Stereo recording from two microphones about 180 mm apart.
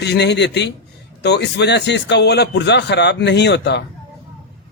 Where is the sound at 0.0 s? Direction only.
70° left (ahead or behind).